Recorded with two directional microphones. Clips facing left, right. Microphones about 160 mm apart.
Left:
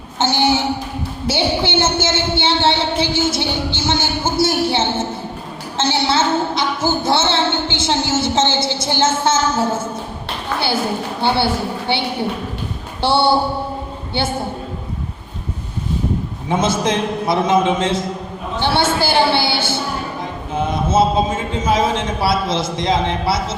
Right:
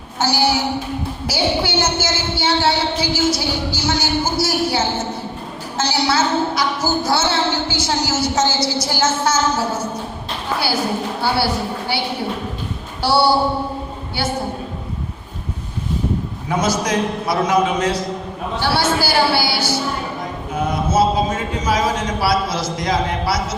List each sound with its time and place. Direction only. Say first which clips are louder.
0.2 s a man's voice: left 1 dB; 25° left (ahead or behind)
1.3 s a sound: left 2 dB; 25° left (ahead or behind)
5.7 s a woman's voice: left 1 dB; 25° left (ahead or behind)
11.2 s a man's voice: left 3 dB; 25° left (ahead or behind)
13.0 s a man's voice: even; 25° left (ahead or behind)
16.5 s a man's voice: left 2 dB; 25° left (ahead or behind)